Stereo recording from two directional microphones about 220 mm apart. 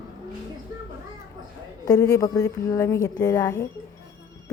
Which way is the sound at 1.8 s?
15° left (ahead or behind).